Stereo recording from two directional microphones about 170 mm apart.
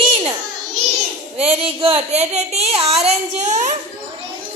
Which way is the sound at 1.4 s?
35° right (ahead or behind).